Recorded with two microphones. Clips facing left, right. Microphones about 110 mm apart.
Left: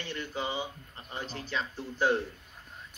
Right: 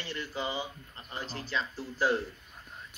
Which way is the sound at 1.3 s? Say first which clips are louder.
Right 1 dB; centre (ahead or behind).